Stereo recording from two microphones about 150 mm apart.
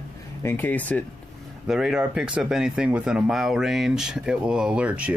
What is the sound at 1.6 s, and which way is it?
Speech, 5° right (ahead or behind).